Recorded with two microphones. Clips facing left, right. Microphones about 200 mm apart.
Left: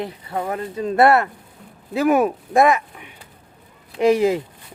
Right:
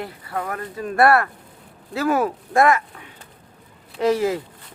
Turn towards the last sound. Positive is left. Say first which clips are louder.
# left 3 dB
turn(degrees=15)  # may be behind; listen again after turning